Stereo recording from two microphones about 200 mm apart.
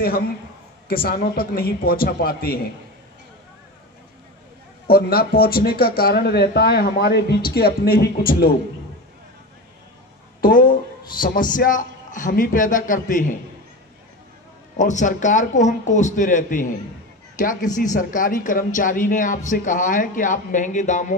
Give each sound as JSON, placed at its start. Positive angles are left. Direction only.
{"t": 0.8, "sound": "speech", "side_deg": 50}
{"t": 4.8, "sound": "speech", "side_deg": 50}
{"t": 10.4, "sound": "speech", "side_deg": 45}
{"t": 14.8, "sound": "speech", "side_deg": 40}